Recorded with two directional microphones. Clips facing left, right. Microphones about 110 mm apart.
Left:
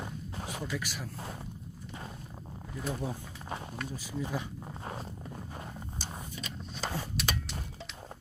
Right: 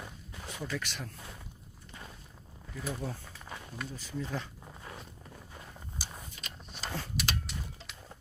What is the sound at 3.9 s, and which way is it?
Speech, 10° left (ahead or behind).